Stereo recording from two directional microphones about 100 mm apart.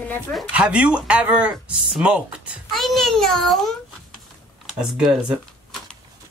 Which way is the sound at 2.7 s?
Centre (ahead or behind).